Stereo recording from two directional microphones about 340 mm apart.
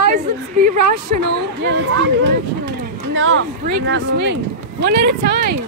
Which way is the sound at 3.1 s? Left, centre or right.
Right.